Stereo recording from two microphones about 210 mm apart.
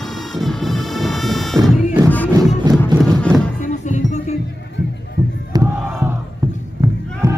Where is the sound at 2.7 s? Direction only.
Centre (ahead or behind).